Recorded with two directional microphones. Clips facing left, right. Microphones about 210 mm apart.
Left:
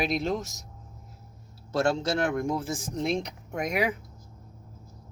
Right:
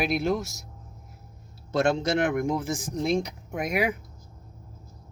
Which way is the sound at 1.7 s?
20° right (ahead or behind).